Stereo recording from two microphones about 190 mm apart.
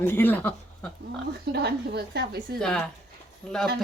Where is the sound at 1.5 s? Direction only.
60° right (ahead or behind).